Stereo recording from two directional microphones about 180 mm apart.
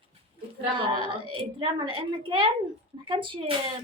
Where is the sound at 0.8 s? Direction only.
30° right (ahead or behind).